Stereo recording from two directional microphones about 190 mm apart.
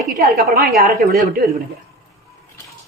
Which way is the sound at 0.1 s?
50° right (ahead or behind).